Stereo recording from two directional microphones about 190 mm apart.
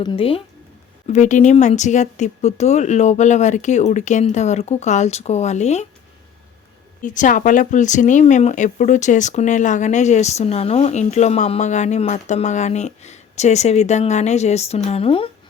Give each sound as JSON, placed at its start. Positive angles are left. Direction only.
{"t": 0.0, "sound": "speech", "side_deg": 25}
{"t": 1.0, "sound": "speech", "side_deg": 40}
{"t": 7.0, "sound": "speech", "side_deg": 40}